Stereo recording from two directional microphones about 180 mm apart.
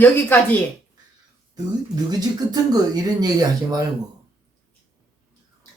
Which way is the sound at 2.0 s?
20° right (ahead or behind).